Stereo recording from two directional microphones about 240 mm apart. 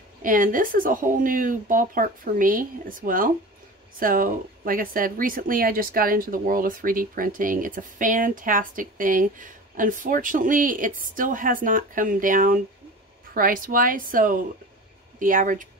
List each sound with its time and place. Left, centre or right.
0.2 s speech: right